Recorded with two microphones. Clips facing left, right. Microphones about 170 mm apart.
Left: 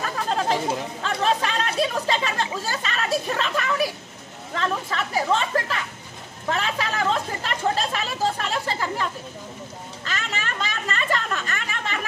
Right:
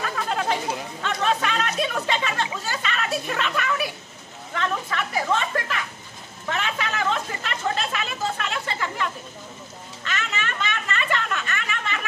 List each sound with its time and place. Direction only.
0.0 s chatter: 35° left (ahead or behind)
1.0 s speech: 35° left (ahead or behind)
6.5 s chatter: 35° left (ahead or behind)